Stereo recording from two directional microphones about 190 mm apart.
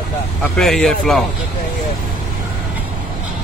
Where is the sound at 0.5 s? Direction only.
Centre (ahead or behind).